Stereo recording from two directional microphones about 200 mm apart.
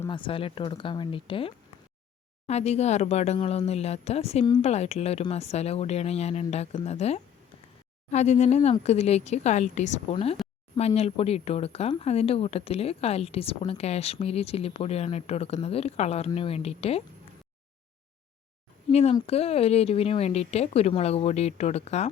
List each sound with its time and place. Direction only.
0.1 s speech: 25° left (ahead or behind)
18.9 s speech: 30° left (ahead or behind)